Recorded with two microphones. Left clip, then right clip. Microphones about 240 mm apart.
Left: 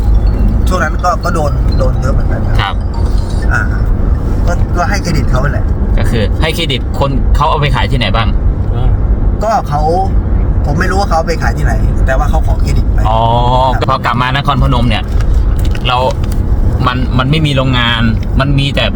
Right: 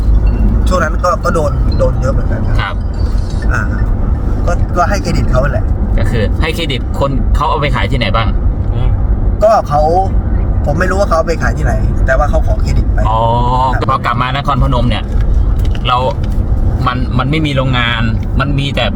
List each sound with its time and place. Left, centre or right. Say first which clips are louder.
0.7 s speech: even; centre
4.7 s speech: right 2 dB; centre
6.0 s speech: left 1 dB; centre
9.4 s speech: right 4 dB; centre
13.1 s speech: left 2 dB; centre
16.8 s speech: left 2 dB; centre